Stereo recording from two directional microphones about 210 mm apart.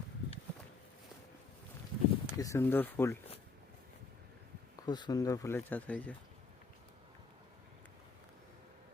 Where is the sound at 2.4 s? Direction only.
15° left (ahead or behind).